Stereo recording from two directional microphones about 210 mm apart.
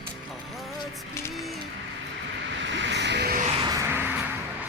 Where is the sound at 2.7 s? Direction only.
60° right (ahead or behind).